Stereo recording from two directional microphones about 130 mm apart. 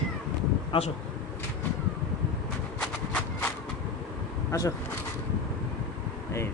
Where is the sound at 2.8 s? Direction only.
15° left (ahead or behind).